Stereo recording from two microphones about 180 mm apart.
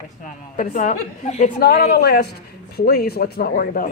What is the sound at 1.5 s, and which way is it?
Speech, 55° left (ahead or behind).